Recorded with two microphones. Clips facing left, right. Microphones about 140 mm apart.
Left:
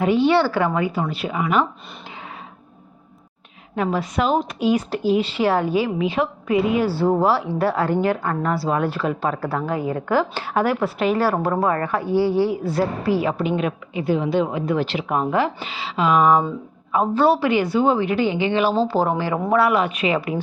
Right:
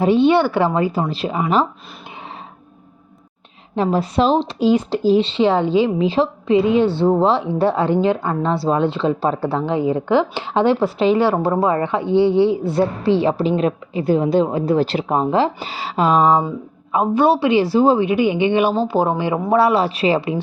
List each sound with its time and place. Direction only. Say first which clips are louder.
0.0 s speech: right 3 dB; 25° right (ahead or behind)
3.8 s speech: right 4 dB; 30° right (ahead or behind)
15.6 s speech: right 3 dB; 40° right (ahead or behind)
16.9 s speech: right 2 dB; 20° right (ahead or behind)